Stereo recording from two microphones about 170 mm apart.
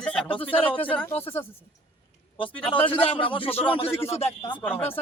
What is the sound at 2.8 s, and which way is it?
Speech, 35° left (ahead or behind).